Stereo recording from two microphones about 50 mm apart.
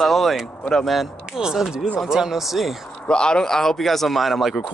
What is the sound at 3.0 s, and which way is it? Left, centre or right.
Speech, centre.